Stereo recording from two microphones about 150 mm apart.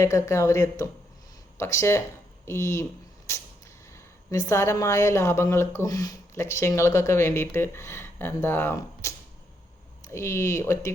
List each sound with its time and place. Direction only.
0.0 s speech: 20° left (ahead or behind)
3.3 s a sound: 20° left (ahead or behind)
3.9 s speech: 20° left (ahead or behind)